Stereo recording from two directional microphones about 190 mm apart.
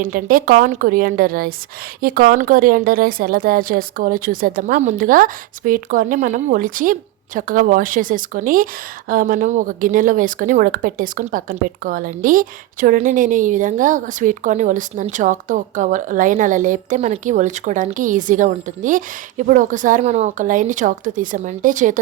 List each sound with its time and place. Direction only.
0.0 s a woman's voice: 50° right (ahead or behind)